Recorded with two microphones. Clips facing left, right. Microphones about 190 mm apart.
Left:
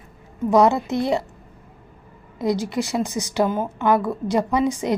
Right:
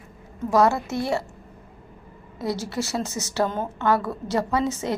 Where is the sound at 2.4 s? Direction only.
15° left (ahead or behind).